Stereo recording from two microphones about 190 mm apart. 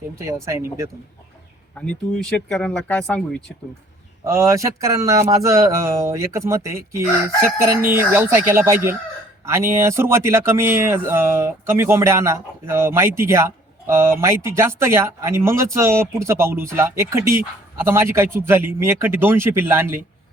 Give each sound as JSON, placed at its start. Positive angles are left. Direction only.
{"t": 0.2, "sound": "speech", "side_deg": -15}
{"t": 1.7, "sound": "speech", "side_deg": 5}
{"t": 4.2, "sound": "speech", "side_deg": -15}